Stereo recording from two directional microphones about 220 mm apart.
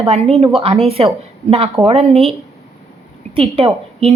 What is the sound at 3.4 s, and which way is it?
Speech, 25° right (ahead or behind).